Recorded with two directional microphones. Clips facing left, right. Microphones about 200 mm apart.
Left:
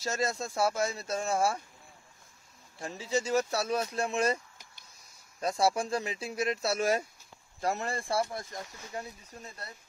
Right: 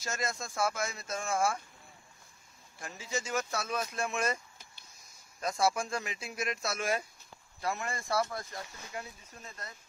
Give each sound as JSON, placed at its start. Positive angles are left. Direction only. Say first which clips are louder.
{"t": 0.0, "sound": "speech", "louder": "left 5 dB", "side_deg": 35}
{"t": 2.8, "sound": "speech", "louder": "left 6 dB", "side_deg": 35}
{"t": 5.4, "sound": "speech", "louder": "left 2 dB", "side_deg": 35}